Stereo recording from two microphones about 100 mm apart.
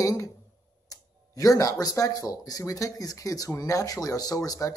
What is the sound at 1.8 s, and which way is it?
Speech, 35° left (ahead or behind).